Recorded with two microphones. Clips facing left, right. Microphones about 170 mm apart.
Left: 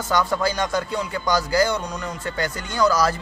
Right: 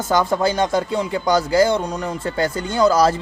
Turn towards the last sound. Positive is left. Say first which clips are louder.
# right 4 dB
turn(degrees=-25)  # may be behind; listen again after turning